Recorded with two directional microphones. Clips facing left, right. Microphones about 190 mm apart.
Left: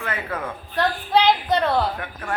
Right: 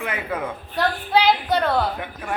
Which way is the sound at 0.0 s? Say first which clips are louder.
Right 2 dB; 15° right (ahead or behind).